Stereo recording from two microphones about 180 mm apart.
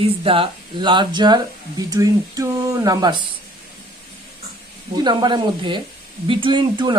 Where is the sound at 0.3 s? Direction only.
30° right (ahead or behind).